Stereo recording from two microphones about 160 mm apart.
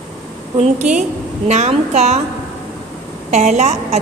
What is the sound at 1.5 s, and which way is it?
Speech, 45° right (ahead or behind).